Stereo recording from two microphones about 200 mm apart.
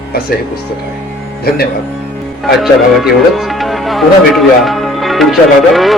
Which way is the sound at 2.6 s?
Centre (ahead or behind).